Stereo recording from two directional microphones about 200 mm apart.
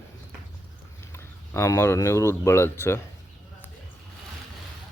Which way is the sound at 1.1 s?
10° left (ahead or behind).